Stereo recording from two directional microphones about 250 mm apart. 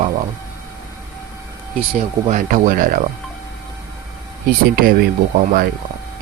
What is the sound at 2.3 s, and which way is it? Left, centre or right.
Speech, right.